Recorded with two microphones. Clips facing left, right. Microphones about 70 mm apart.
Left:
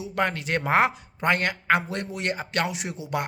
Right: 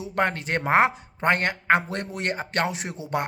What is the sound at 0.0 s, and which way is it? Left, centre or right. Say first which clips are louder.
Speech: right 1 dB; right.